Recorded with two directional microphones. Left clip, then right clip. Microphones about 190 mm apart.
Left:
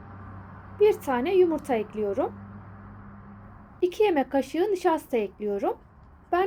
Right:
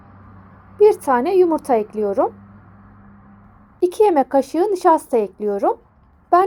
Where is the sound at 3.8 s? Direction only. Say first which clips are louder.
Right 8 dB; 20° right (ahead or behind).